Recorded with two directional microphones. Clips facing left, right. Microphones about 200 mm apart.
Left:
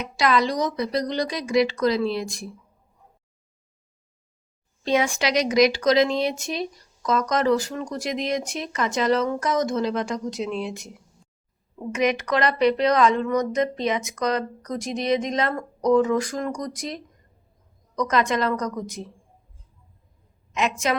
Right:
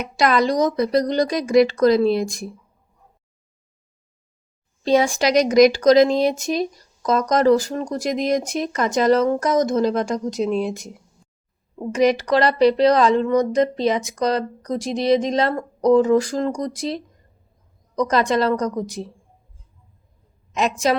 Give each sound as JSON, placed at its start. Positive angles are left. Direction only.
{"t": 0.0, "sound": "speech", "side_deg": -50}
{"t": 4.9, "sound": "speech", "side_deg": -35}
{"t": 20.5, "sound": "a woman's voice", "side_deg": -35}